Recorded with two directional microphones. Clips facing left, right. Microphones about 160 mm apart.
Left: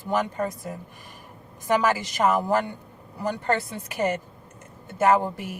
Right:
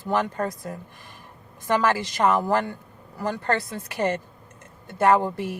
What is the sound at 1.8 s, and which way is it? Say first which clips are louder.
A woman's voice: right 2 dB; 15° left (ahead or behind).